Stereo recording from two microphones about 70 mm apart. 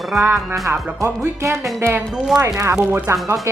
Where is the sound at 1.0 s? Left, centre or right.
Right.